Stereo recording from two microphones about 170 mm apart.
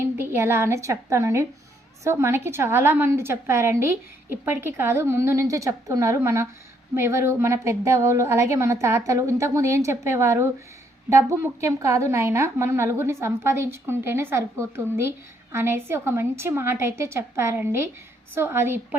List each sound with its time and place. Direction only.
0.0 s a woman's voice: 15° right (ahead or behind)